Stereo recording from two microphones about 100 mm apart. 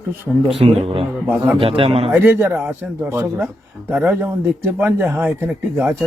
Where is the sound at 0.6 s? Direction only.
75° right (ahead or behind).